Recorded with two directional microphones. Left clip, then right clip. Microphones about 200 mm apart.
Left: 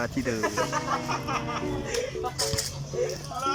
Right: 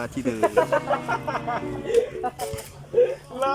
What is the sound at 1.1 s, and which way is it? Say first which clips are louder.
Speech: right 3 dB; 50° right (ahead or behind).